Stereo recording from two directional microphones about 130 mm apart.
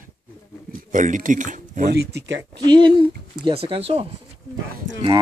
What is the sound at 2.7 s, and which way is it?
Speech, 40° right (ahead or behind).